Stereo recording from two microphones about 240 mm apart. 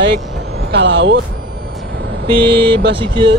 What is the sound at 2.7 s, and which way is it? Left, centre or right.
Speech, centre.